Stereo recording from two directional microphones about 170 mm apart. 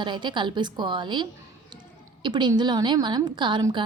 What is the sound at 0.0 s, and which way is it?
A woman's voice, 25° right (ahead or behind).